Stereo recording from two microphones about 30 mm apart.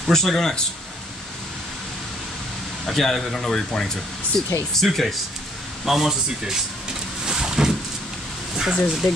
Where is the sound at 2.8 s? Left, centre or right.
Centre.